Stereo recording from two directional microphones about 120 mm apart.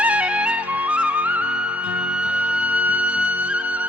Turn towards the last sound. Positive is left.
turn(degrees=-10)  # may be behind; listen again after turning